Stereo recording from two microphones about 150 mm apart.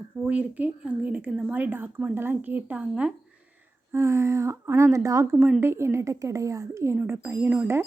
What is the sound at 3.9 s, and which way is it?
A woman's voice, 20° right (ahead or behind).